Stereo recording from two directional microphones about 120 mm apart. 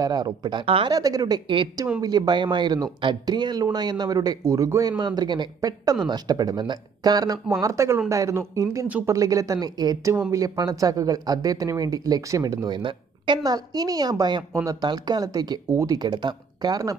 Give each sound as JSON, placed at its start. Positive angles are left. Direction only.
{"t": 0.0, "sound": "speech", "side_deg": -35}
{"t": 0.9, "sound": "speech", "side_deg": -30}